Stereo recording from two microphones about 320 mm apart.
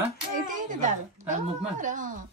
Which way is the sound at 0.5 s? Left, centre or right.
Right.